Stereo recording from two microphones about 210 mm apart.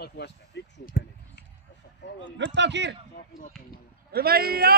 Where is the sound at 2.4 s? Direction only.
55° right (ahead or behind).